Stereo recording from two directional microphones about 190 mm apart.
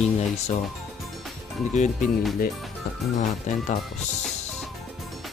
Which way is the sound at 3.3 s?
40° left (ahead or behind).